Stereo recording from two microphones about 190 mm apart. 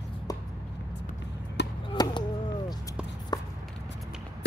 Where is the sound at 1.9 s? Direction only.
25° left (ahead or behind).